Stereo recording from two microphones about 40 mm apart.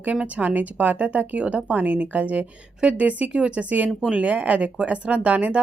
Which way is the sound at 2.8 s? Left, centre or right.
Right.